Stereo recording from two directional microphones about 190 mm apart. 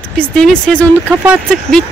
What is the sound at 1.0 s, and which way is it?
Speech, 10° right (ahead or behind).